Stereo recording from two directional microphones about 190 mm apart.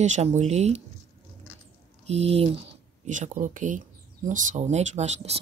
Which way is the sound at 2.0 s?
35° right (ahead or behind).